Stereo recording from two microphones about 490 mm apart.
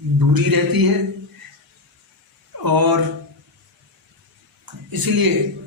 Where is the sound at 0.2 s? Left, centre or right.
Right.